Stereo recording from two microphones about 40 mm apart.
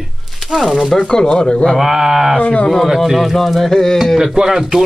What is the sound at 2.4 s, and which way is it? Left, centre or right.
Speech, left.